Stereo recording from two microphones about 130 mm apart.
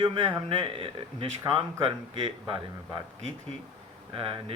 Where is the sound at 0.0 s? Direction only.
40° right (ahead or behind).